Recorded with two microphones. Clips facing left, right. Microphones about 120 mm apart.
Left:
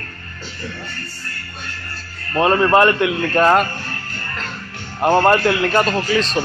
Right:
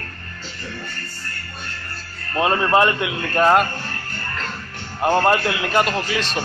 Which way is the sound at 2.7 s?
15° right (ahead or behind).